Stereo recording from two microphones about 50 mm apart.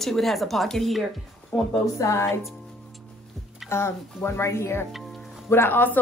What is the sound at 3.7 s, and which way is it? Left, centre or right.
Speech, left.